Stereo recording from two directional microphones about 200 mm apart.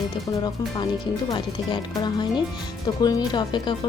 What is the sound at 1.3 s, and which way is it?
Speech, 20° left (ahead or behind).